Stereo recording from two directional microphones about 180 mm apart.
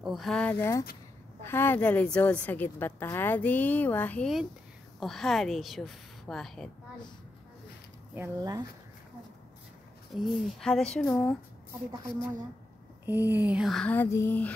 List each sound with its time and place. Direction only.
0.0 s a woman's voice: centre (ahead or behind)
8.1 s speech: 15° right (ahead or behind)
10.1 s a woman's voice: centre (ahead or behind)
13.0 s a woman's voice: 10° right (ahead or behind); by 14.5 s 10° left (ahead or behind)